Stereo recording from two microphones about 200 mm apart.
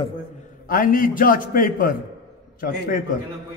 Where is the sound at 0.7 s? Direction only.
45° left (ahead or behind).